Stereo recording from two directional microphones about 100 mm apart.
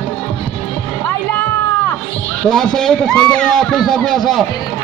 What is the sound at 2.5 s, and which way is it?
A man's voice, 5° left (ahead or behind).